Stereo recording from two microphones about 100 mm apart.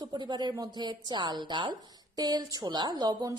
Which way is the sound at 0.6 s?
45° right (ahead or behind).